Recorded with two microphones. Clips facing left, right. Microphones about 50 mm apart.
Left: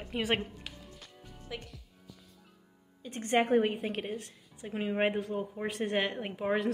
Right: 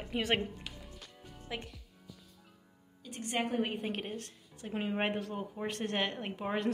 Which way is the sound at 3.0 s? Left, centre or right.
Left.